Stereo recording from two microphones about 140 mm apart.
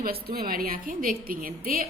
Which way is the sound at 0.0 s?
90° right.